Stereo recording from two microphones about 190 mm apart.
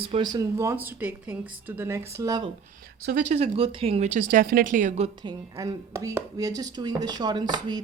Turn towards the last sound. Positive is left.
turn(degrees=-20)  # may be behind; listen again after turning